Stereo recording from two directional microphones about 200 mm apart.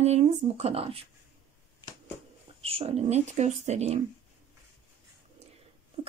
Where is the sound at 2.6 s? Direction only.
30° right (ahead or behind).